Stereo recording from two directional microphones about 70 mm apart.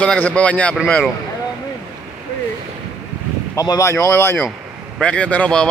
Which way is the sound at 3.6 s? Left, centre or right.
Left.